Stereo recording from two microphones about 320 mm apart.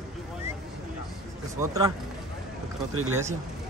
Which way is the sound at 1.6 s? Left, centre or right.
Centre.